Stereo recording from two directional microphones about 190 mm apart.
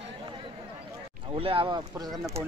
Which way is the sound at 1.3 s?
30° right (ahead or behind).